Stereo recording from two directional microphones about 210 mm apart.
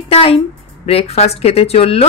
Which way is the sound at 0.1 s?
25° left (ahead or behind).